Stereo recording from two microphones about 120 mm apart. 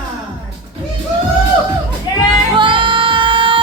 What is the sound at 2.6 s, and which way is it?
Music, 45° right (ahead or behind).